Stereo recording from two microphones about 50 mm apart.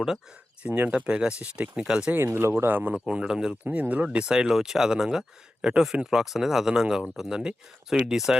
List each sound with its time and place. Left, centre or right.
0.6 s speech: right
2.2 s speech: right
2.6 s speech: right
3.1 s speech: centre
3.6 s speech: right; by 8.4 s centre